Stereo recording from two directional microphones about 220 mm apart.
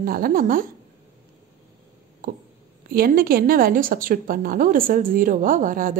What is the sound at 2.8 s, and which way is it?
Speech, 40° right (ahead or behind).